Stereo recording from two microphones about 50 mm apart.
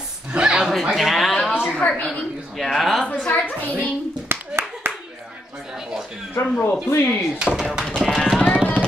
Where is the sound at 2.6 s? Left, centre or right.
Centre.